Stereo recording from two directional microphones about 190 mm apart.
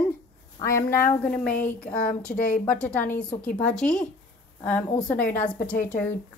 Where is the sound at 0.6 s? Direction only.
20° left (ahead or behind).